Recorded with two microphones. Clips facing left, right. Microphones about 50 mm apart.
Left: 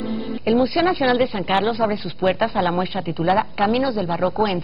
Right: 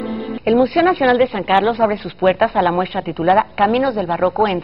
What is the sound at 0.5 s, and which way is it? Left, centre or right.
Speech, centre.